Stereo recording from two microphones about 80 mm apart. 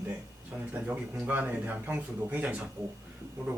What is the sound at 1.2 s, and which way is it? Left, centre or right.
A man's voice, right.